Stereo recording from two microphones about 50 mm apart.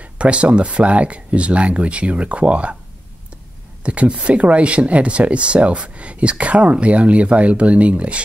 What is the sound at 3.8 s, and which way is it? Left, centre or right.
Speech, right.